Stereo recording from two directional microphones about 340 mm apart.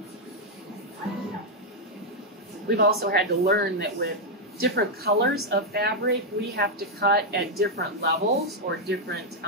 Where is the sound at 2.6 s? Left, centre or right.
Right.